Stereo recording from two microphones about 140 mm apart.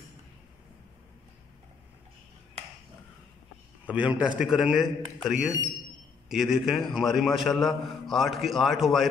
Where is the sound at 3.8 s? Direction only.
10° right (ahead or behind).